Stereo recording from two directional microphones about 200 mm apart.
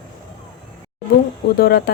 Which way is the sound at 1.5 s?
50° left (ahead or behind).